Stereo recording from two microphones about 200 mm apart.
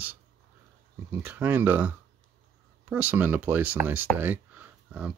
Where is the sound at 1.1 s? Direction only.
10° right (ahead or behind).